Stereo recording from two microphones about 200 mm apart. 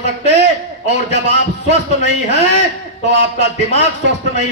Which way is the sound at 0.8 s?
60° right (ahead or behind).